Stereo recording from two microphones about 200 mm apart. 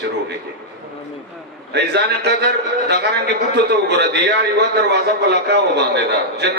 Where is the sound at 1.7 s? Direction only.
55° right (ahead or behind).